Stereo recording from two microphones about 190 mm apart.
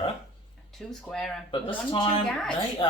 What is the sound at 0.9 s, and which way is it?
Speech, 5° left (ahead or behind).